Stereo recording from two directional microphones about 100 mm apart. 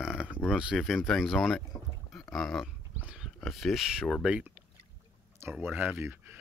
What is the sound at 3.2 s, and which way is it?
Speech, centre (ahead or behind).